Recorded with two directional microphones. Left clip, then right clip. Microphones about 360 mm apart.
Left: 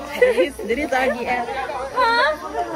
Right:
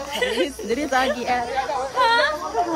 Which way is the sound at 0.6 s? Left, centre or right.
Centre.